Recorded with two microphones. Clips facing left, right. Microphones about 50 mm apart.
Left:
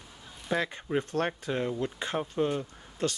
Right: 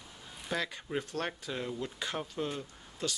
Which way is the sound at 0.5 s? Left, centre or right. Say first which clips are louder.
Left 6 dB; left.